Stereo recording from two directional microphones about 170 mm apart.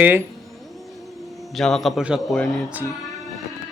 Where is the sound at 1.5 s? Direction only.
Centre (ahead or behind).